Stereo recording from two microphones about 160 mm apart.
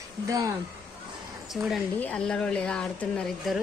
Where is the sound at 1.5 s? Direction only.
Centre (ahead or behind).